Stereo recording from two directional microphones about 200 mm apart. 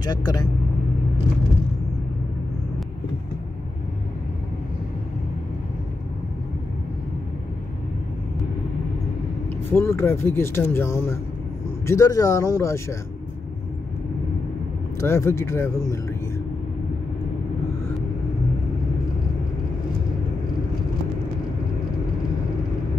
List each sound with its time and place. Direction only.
0.0 s speech: 20° left (ahead or behind)
9.7 s speech: 10° left (ahead or behind)
15.0 s speech: 15° left (ahead or behind)